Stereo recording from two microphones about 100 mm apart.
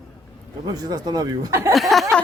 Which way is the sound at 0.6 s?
40° right (ahead or behind).